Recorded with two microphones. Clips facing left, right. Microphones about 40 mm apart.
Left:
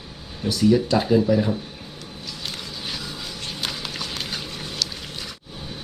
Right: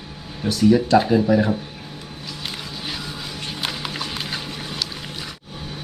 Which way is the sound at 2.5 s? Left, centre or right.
Centre.